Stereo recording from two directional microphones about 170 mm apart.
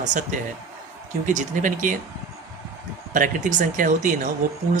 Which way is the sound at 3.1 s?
50° right (ahead or behind).